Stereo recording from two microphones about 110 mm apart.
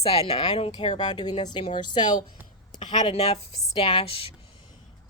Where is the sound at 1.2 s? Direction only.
40° left (ahead or behind).